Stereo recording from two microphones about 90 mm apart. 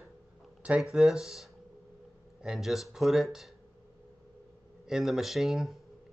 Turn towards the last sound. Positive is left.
turn(degrees=0)  # may be behind; listen again after turning